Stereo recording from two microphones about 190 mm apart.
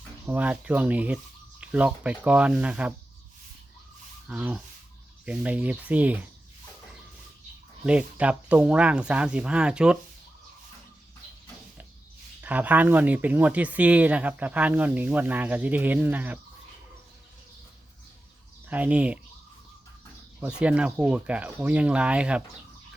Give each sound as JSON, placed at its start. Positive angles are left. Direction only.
{"t": 0.3, "sound": "speech", "side_deg": -10}
{"t": 4.3, "sound": "speech", "side_deg": -5}
{"t": 7.9, "sound": "speech", "side_deg": -5}
{"t": 12.4, "sound": "speech", "side_deg": -10}
{"t": 18.7, "sound": "speech", "side_deg": -5}
{"t": 20.4, "sound": "speech", "side_deg": -5}